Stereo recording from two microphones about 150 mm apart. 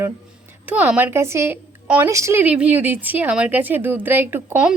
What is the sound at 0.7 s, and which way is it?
A woman's voice, 10° right (ahead or behind).